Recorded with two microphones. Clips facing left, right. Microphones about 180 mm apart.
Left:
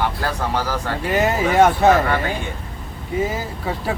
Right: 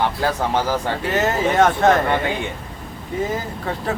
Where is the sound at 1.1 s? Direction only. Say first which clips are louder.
Left 2 dB; 10° left (ahead or behind).